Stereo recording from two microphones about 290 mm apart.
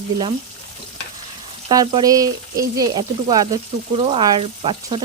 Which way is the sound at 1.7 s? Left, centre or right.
Centre.